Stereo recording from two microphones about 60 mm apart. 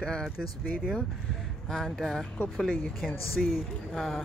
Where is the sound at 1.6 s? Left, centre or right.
Centre.